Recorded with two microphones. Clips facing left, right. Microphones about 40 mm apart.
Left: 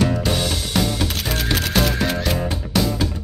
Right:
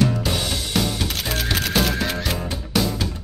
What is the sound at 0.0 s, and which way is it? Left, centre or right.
Music, centre.